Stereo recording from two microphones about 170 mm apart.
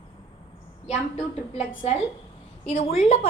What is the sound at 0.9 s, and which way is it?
Speech, 45° left (ahead or behind).